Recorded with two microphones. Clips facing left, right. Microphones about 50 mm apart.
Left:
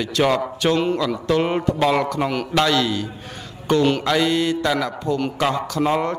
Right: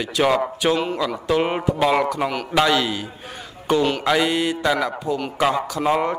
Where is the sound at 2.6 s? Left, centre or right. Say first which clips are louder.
Even; centre.